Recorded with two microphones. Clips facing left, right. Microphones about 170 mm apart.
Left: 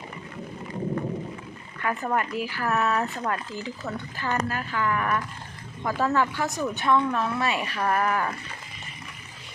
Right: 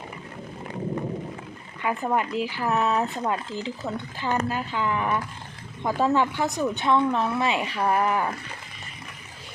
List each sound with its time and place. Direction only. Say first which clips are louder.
1.8 s speech: right 2 dB; 15° right (ahead or behind)